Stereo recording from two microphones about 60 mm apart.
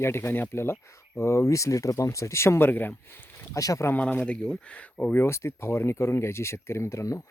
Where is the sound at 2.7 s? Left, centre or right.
Left.